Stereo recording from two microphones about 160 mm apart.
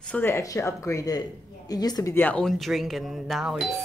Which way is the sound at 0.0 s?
10° left (ahead or behind).